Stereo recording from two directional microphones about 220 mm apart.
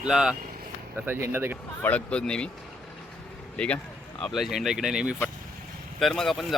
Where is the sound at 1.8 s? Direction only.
5° left (ahead or behind).